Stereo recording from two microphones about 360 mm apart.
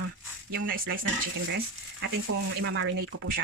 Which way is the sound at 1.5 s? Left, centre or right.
Right.